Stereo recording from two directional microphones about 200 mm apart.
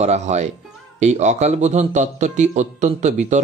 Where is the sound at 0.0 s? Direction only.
35° right (ahead or behind).